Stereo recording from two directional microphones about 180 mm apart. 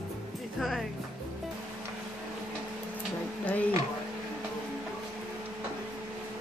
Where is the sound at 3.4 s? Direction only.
10° left (ahead or behind).